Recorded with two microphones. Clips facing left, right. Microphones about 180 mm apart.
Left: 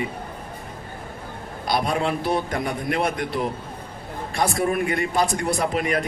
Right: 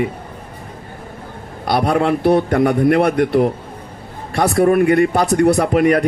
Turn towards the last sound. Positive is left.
turn(degrees=-60)  # may be behind; listen again after turning